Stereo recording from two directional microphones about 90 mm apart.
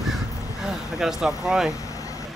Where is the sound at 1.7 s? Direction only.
40° left (ahead or behind).